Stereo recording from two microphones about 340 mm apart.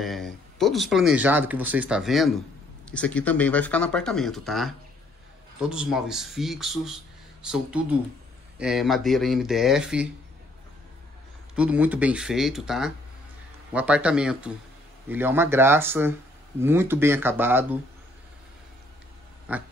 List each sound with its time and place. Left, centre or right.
0.0 s speech: centre
11.5 s speech: centre
19.5 s speech: centre